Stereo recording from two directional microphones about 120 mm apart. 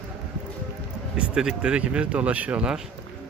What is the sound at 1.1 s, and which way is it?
A man's voice, 10° right (ahead or behind).